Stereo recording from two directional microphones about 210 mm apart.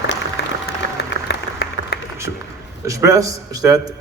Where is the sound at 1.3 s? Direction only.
50° left (ahead or behind).